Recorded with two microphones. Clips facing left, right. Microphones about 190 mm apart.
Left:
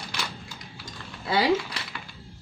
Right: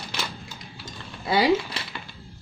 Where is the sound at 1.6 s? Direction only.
25° right (ahead or behind).